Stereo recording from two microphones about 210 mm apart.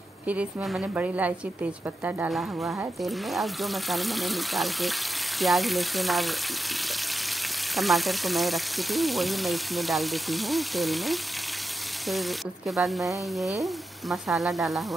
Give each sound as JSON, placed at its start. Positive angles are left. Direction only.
{"t": 0.3, "sound": "a woman's voice", "side_deg": -5}
{"t": 7.7, "sound": "a woman's voice", "side_deg": 0}